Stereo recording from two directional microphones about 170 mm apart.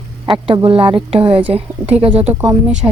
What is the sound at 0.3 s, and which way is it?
Speech, 30° right (ahead or behind).